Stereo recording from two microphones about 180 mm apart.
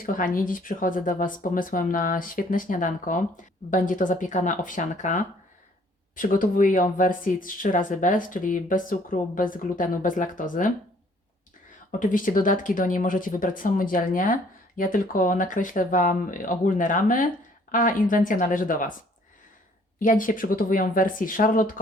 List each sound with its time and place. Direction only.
0.0 s speech: 50° left (ahead or behind)
11.9 s speech: 50° left (ahead or behind)
20.0 s speech: 50° left (ahead or behind)